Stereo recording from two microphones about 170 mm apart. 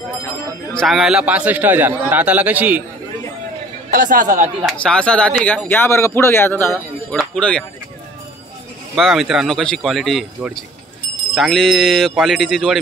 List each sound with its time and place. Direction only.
0.7 s a man's voice: centre (ahead or behind)
3.9 s speech: 50° right (ahead or behind)
4.7 s speech: 5° left (ahead or behind)
8.9 s speech: centre (ahead or behind)